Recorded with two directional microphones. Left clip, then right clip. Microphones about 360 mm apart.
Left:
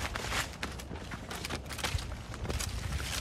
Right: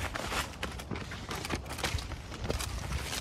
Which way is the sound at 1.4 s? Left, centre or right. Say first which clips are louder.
Right 1 dB; centre.